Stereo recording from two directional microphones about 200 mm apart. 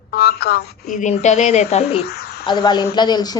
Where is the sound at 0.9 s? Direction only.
35° left (ahead or behind).